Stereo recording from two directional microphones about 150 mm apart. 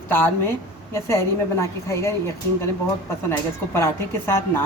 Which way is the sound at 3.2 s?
15° left (ahead or behind).